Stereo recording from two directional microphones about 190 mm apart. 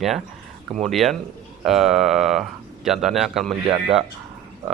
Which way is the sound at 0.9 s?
Centre (ahead or behind).